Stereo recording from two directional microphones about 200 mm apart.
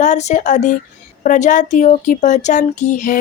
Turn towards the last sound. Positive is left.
turn(degrees=40)  # may be behind; listen again after turning